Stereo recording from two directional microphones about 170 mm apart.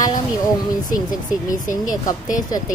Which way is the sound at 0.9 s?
20° left (ahead or behind).